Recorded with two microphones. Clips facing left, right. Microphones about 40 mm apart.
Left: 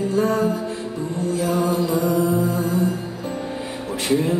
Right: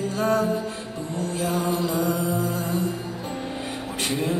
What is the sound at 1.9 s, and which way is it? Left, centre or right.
Music, left.